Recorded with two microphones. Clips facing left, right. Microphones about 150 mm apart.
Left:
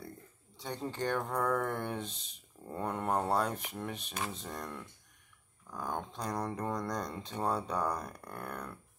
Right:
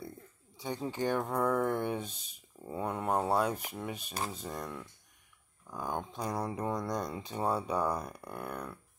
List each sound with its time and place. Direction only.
0.6 s speech: 5° right (ahead or behind)